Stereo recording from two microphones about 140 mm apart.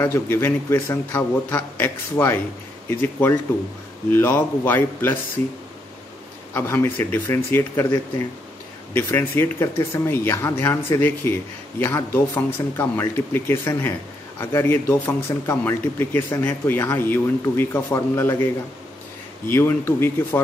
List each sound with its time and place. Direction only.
0.0 s speech: 20° left (ahead or behind)
6.5 s speech: 15° left (ahead or behind)
8.9 s speech: 15° left (ahead or behind)